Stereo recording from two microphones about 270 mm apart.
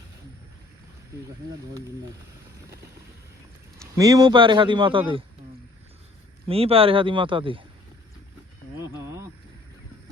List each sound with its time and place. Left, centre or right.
3.8 s speech: centre
6.5 s speech: right
8.8 s a sound: centre